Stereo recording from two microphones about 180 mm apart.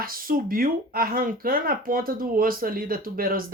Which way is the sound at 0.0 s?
55° right (ahead or behind).